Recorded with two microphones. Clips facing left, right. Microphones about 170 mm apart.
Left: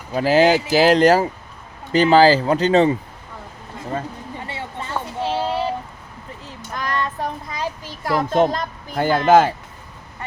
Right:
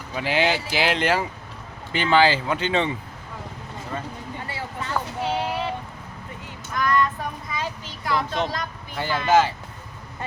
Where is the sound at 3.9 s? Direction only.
30° left (ahead or behind).